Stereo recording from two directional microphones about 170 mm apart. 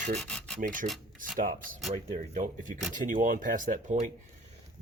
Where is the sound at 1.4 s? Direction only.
55° right (ahead or behind).